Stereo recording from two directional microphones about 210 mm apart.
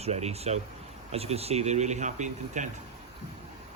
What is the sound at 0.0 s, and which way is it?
Speech, 30° right (ahead or behind).